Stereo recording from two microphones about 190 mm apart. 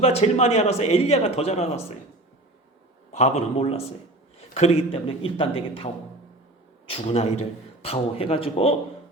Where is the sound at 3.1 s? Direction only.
35° left (ahead or behind).